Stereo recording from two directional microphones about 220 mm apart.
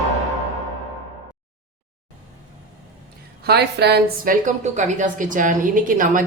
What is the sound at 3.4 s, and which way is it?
A woman's voice, 50° right (ahead or behind).